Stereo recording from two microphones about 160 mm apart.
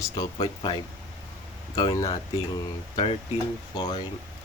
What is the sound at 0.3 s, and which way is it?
Speech, 30° left (ahead or behind).